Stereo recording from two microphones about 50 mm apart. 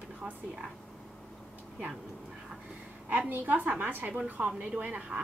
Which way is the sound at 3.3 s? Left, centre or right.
Right.